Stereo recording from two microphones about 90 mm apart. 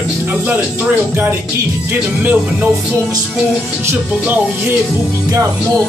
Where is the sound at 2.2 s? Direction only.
20° right (ahead or behind).